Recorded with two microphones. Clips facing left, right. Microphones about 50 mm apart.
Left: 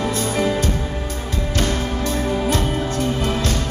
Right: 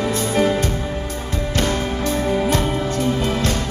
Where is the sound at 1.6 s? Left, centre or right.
Right.